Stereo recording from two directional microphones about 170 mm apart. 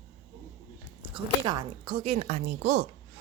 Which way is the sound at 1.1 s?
25° right (ahead or behind).